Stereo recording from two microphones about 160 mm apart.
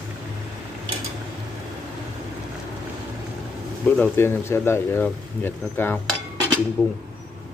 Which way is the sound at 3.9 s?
10° left (ahead or behind).